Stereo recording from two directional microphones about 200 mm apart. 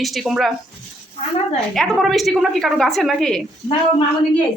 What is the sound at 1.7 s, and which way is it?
A woman's voice, centre (ahead or behind).